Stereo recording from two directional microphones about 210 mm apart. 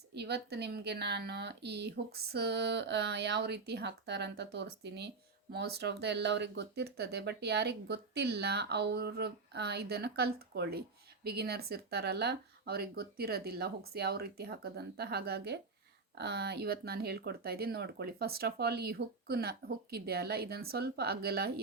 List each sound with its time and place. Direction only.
0.1 s a woman's voice: 50° right (ahead or behind)